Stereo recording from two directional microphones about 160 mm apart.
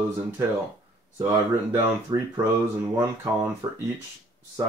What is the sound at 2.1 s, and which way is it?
Speech, 25° right (ahead or behind).